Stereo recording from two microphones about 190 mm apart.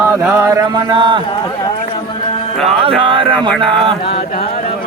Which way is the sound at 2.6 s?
30° right (ahead or behind).